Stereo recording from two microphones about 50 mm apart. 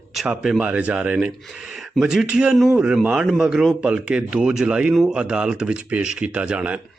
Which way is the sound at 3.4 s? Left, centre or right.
Centre.